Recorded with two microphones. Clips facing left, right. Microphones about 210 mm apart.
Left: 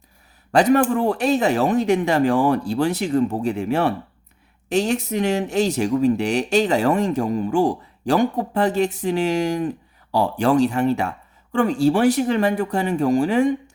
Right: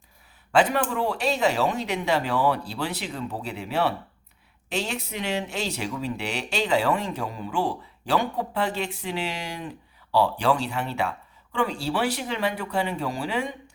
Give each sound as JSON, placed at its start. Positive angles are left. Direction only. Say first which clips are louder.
{"t": 0.5, "sound": "speech", "louder": "left 6 dB", "side_deg": 45}